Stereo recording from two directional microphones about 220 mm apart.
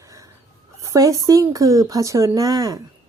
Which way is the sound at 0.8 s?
15° right (ahead or behind).